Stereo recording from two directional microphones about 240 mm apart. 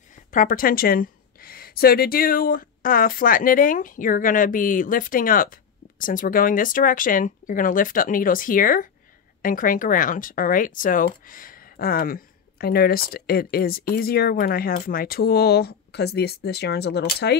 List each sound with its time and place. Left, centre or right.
0.3 s a woman's voice: left